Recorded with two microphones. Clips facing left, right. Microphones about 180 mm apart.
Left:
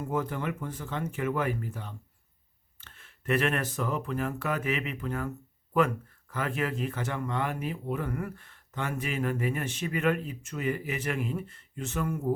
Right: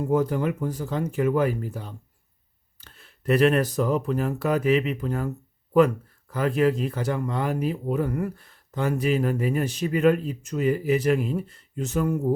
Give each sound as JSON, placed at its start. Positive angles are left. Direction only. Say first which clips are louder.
{"t": 0.0, "sound": "speech", "louder": "right 8 dB", "side_deg": -40}